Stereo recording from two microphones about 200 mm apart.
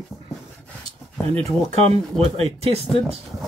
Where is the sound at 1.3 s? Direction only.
30° right (ahead or behind).